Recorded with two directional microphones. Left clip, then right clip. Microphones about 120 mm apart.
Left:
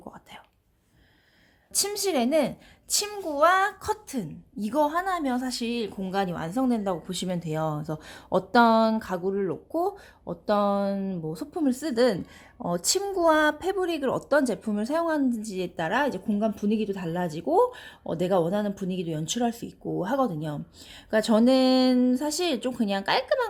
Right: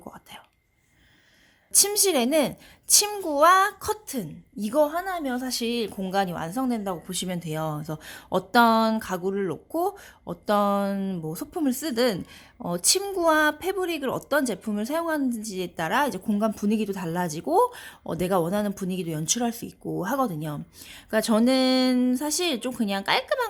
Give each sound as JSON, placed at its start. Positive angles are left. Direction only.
{"t": 0.0, "sound": "whispering", "side_deg": -20}
{"t": 1.7, "sound": "speech", "side_deg": -25}
{"t": 5.5, "sound": "speech", "side_deg": -30}